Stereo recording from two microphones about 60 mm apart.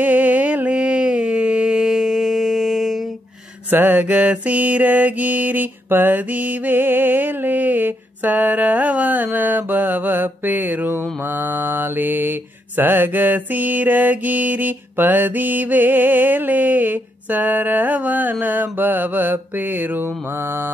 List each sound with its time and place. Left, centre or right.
0.0 s music: right; by 3.0 s centre
3.7 s mantra: right